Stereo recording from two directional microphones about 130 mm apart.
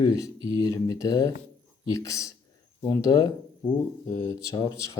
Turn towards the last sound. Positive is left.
turn(degrees=25)  # may be behind; listen again after turning